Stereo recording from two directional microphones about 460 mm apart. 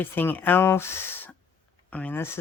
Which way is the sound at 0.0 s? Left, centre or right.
Centre.